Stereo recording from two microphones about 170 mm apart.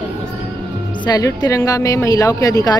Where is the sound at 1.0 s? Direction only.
25° left (ahead or behind).